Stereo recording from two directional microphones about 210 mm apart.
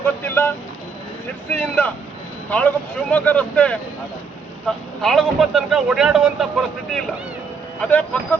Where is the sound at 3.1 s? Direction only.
10° left (ahead or behind).